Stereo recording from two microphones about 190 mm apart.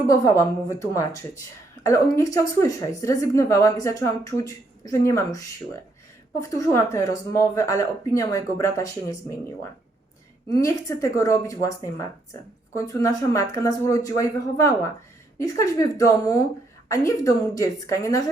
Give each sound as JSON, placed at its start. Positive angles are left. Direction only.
{"t": 0.1, "sound": "speech", "side_deg": 15}
{"t": 10.5, "sound": "speech", "side_deg": 15}